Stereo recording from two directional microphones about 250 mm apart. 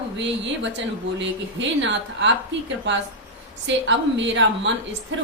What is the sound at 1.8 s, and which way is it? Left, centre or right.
Speech, right.